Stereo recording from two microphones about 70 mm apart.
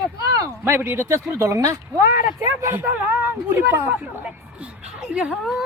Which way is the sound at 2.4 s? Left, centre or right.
Right.